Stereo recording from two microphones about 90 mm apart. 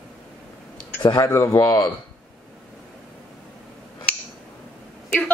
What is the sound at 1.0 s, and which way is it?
Speech, 50° left (ahead or behind).